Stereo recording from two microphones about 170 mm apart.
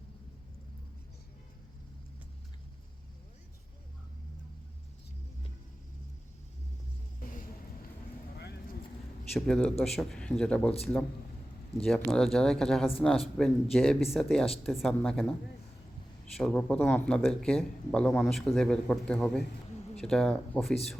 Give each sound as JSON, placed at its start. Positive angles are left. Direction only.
{"t": 7.2, "sound": "music", "side_deg": 55}
{"t": 8.4, "sound": "vehicle", "side_deg": 75}
{"t": 9.3, "sound": "speech", "side_deg": 5}
{"t": 16.4, "sound": "speech", "side_deg": 5}